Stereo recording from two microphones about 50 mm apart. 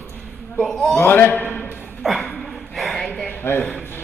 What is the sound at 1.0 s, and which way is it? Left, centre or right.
Speech, left.